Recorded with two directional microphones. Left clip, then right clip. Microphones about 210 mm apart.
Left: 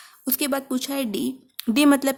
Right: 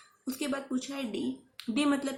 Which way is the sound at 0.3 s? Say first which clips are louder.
Left 9 dB; 50° left (ahead or behind).